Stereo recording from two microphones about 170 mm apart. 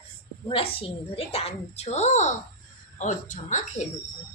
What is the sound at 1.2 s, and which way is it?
A woman's voice, 35° left (ahead or behind).